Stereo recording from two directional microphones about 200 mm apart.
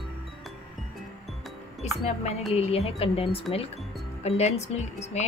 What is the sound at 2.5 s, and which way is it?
Speech, 30° left (ahead or behind).